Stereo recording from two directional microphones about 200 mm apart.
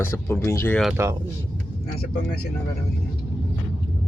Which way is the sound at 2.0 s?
50° left (ahead or behind).